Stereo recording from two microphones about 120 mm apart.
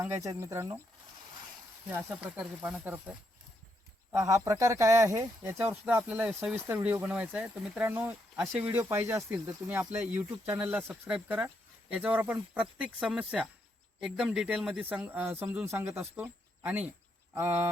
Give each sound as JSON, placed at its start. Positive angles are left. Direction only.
{"t": 0.0, "sound": "speech", "side_deg": -25}
{"t": 1.9, "sound": "speech", "side_deg": -15}
{"t": 4.1, "sound": "speech", "side_deg": -25}
{"t": 8.7, "sound": "speech", "side_deg": -20}